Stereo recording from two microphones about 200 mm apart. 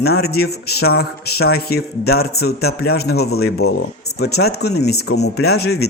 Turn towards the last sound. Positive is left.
turn(degrees=55)  # may be behind; listen again after turning